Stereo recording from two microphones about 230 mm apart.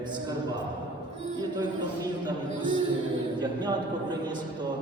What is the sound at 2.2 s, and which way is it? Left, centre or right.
A man's voice, centre.